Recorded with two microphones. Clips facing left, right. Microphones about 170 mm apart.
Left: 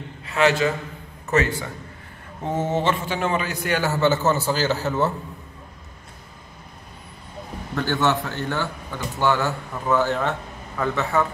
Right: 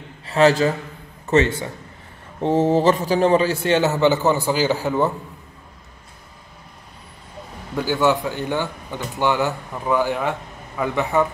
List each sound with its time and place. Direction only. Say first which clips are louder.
0.3 s a man's voice: right 4 dB; 35° right (ahead or behind)
1.3 s a man's voice: right 4 dB; 25° right (ahead or behind)
7.7 s a man's voice: right 3 dB; 10° right (ahead or behind)